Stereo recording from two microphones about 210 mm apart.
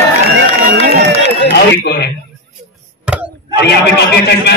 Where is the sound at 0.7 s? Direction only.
40° right (ahead or behind).